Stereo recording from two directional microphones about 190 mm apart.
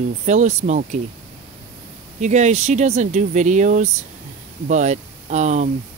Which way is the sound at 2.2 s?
35° right (ahead or behind).